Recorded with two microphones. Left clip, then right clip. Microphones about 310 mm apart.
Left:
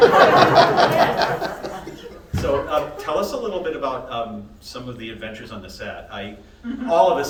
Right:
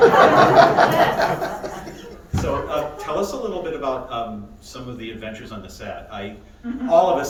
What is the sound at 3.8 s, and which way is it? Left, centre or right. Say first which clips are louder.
A man's voice: even; centre.